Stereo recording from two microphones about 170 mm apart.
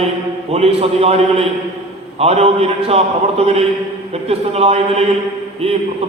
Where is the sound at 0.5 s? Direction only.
35° right (ahead or behind).